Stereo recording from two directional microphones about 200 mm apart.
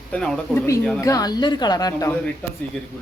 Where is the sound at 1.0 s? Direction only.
15° left (ahead or behind).